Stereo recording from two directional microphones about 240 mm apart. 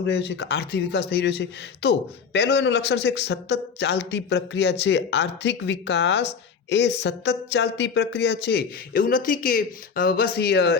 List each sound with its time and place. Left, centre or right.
0.0 s a man's voice: left